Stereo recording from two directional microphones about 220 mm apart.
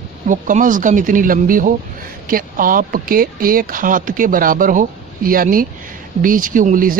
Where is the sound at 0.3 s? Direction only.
35° right (ahead or behind).